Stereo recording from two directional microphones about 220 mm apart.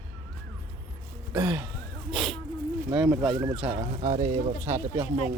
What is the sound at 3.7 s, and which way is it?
Speech, 30° right (ahead or behind).